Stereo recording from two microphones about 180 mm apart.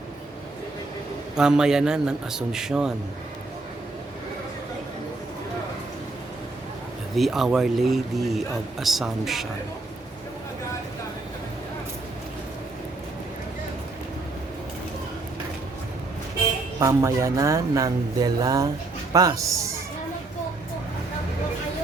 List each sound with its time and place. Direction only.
1.4 s speech: 5° right (ahead or behind)
7.2 s speech: centre (ahead or behind)
16.8 s speech: 15° right (ahead or behind)